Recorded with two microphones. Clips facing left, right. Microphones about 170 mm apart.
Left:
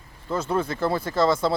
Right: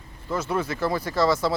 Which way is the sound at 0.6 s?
25° left (ahead or behind).